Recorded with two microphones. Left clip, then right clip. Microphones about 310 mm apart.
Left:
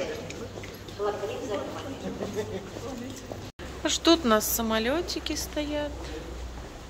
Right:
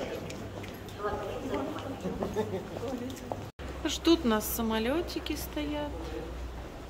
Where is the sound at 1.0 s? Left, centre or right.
Left.